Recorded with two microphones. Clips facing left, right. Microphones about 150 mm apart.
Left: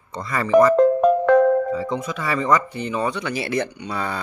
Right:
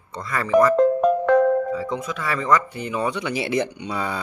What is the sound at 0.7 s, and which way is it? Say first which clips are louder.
Music: left 2 dB; 70° left (ahead or behind).